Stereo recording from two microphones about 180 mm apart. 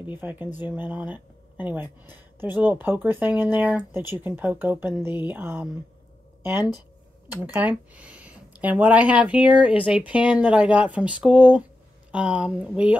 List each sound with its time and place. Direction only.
0.0 s speech: 10° right (ahead or behind)
7.2 s speech: 20° left (ahead or behind)
7.5 s speech: 10° right (ahead or behind)